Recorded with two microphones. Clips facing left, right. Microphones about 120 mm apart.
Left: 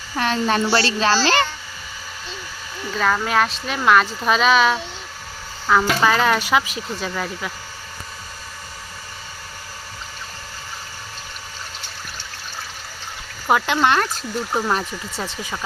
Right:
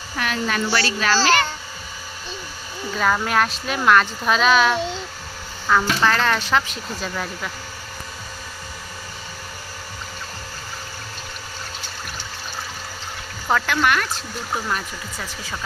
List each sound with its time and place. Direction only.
0.2 s a child's voice: 30° left (ahead or behind)
3.0 s speech: centre (ahead or behind)
13.5 s speech: 25° left (ahead or behind)